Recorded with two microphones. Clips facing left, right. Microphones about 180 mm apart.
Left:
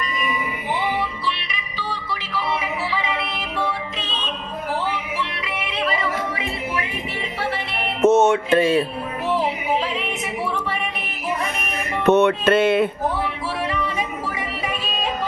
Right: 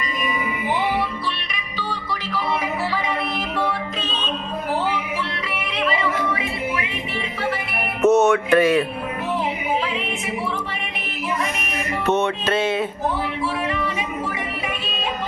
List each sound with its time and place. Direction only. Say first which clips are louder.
8.0 s music: even; 25° left (ahead or behind)
12.0 s music: left 6 dB; 60° left (ahead or behind)